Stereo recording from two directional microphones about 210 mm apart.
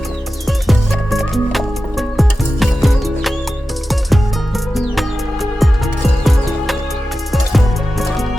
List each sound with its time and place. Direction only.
0.4 s music: centre (ahead or behind)
4.7 s music: centre (ahead or behind)